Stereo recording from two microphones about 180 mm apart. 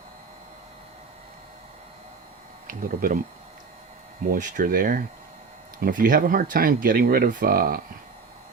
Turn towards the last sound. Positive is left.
turn(degrees=-55)  # may be behind; listen again after turning